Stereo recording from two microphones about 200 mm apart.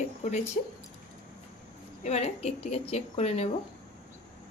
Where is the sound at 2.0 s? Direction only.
35° left (ahead or behind).